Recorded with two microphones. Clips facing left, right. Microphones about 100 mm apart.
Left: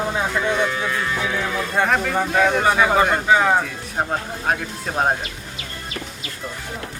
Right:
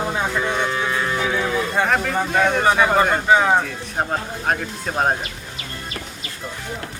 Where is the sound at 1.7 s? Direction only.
Centre (ahead or behind).